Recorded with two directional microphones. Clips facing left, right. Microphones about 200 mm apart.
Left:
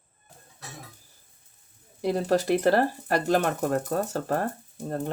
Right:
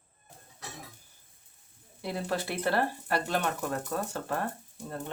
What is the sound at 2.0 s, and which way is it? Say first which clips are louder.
Speech: left 9 dB; 40° left (ahead or behind).